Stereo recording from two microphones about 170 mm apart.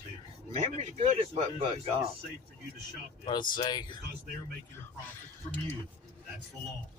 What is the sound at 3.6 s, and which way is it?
Speech, 25° left (ahead or behind).